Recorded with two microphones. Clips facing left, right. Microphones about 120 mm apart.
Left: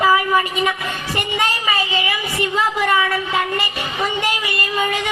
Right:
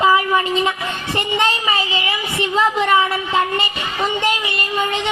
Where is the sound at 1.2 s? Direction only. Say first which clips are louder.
Right 3 dB; 25° right (ahead or behind).